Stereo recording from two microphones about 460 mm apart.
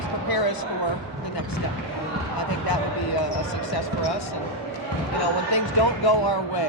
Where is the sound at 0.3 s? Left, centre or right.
Left.